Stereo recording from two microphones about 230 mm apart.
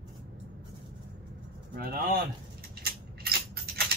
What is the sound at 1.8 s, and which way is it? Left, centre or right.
Speech, right.